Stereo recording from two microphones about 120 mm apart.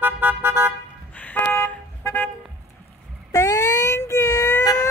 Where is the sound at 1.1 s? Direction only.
15° left (ahead or behind).